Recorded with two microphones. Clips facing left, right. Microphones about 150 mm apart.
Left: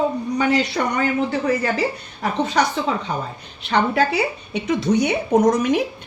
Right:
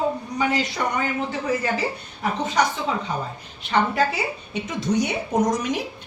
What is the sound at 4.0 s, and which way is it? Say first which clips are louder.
A woman's voice: left 4 dB; 70° left (ahead or behind).